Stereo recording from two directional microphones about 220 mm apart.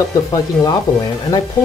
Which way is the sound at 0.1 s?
15° left (ahead or behind).